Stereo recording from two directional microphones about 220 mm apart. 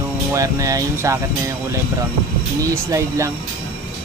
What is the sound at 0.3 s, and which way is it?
Speech, 15° right (ahead or behind).